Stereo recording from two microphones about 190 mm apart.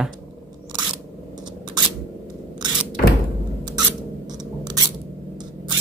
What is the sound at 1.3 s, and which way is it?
Scissors, 20° right (ahead or behind).